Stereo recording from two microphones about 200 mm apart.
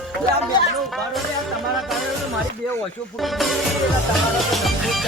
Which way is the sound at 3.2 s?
Centre (ahead or behind).